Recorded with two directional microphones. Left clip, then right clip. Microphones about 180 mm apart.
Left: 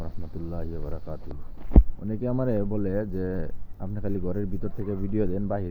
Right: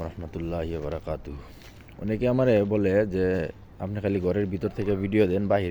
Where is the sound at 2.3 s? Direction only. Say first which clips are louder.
Right 7 dB; 30° right (ahead or behind); by 4.4 s 15° right (ahead or behind).